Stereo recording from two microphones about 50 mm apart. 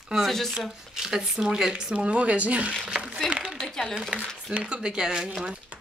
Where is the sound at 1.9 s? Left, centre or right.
Right.